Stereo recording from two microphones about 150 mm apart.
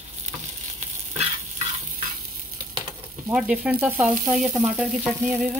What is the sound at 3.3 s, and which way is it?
Speech, 5° right (ahead or behind).